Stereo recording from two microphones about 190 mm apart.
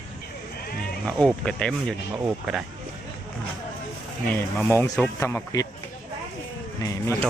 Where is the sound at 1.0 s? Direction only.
5° left (ahead or behind).